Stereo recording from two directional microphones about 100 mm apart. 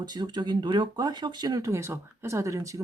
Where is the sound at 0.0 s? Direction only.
45° right (ahead or behind).